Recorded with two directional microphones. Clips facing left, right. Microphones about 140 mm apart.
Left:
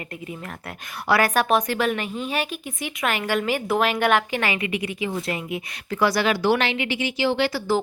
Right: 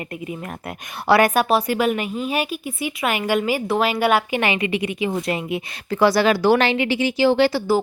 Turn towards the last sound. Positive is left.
turn(degrees=-35)  # may be behind; listen again after turning